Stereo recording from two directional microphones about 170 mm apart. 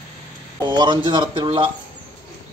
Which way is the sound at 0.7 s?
25° right (ahead or behind).